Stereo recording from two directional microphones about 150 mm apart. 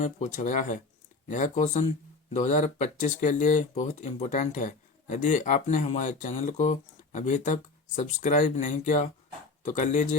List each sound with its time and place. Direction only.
0.0 s speech: 55° left (ahead or behind)